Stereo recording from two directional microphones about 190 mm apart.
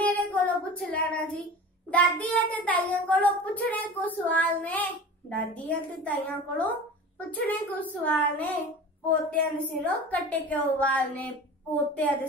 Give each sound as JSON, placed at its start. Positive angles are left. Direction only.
{"t": 0.0, "sound": "child singing", "side_deg": 10}
{"t": 1.9, "sound": "a child's voice", "side_deg": 5}